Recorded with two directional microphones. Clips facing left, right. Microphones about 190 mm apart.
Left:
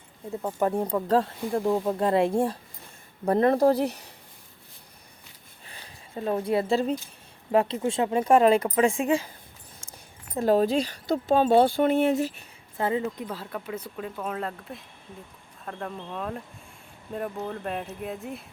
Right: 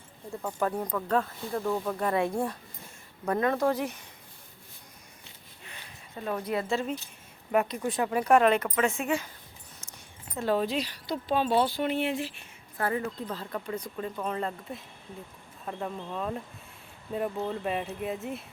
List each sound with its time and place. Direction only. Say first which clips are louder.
0.4 s speech: left 4 dB; 25° left (ahead or behind)
5.6 s a sound: left 1 dB; 30° left (ahead or behind)
7.5 s speech: left 4 dB; 30° left (ahead or behind)
9.8 s a sound: left 5 dB; 30° left (ahead or behind)
10.3 s speech: left 6 dB; 40° left (ahead or behind)
12.7 s speech: left 3 dB; 20° left (ahead or behind); by 18.4 s centre (ahead or behind)